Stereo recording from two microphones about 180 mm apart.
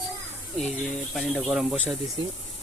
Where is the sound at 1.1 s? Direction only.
Centre (ahead or behind).